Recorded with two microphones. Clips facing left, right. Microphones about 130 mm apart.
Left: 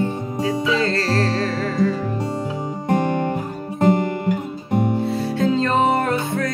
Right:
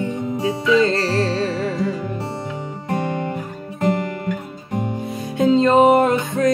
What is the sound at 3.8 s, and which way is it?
Guitar, 35° left (ahead or behind).